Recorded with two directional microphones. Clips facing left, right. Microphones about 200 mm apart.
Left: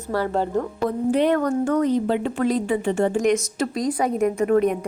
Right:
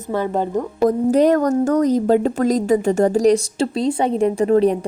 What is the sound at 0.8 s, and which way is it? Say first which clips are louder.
A woman's voice: right 6 dB; 40° right (ahead or behind).